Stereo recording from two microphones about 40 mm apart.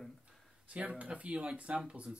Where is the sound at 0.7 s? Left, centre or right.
Right.